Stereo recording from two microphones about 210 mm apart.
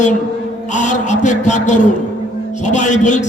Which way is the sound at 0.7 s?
35° left (ahead or behind).